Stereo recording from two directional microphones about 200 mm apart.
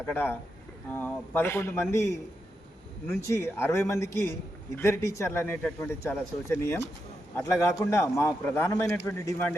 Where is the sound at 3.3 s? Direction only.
10° left (ahead or behind).